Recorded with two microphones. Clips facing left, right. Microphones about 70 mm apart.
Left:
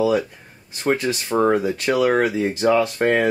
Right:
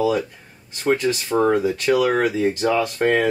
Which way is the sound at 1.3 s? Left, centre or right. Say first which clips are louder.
Left 1 dB; centre.